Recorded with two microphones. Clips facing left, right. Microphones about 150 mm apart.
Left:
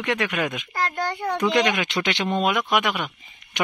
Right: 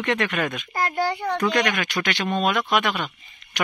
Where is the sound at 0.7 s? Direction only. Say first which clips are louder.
Right 2 dB; 10° right (ahead or behind).